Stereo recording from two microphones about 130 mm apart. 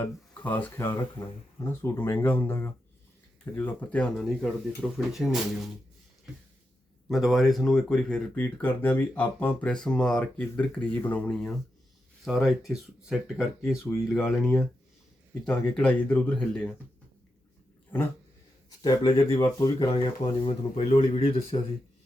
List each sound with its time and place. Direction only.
0.0 s speech: 15° left (ahead or behind)
7.1 s speech: centre (ahead or behind)
15.4 s speech: 10° left (ahead or behind)
18.8 s speech: 30° left (ahead or behind)
20.4 s speech: 45° left (ahead or behind)